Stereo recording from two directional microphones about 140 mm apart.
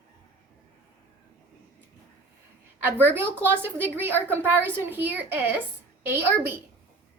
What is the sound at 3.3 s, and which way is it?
A woman's voice, 15° right (ahead or behind).